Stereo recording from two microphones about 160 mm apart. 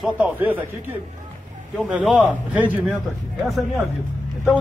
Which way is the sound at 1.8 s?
5° right (ahead or behind).